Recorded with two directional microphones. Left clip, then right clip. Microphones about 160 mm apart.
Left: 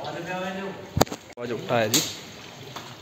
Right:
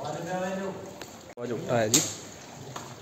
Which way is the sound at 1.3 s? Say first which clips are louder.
Left 3 dB; centre (ahead or behind).